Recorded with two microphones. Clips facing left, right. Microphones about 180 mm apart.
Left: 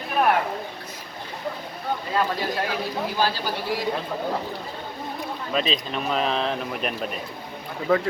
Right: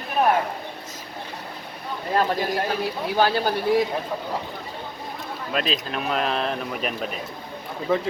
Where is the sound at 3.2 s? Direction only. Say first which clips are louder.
Right 6 dB; 60° right (ahead or behind).